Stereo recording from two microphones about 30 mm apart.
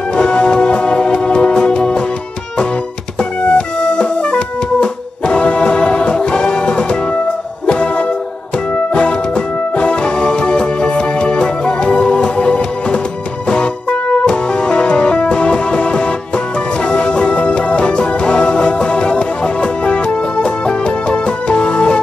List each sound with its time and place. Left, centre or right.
0.1 s music: left
3.2 s music: left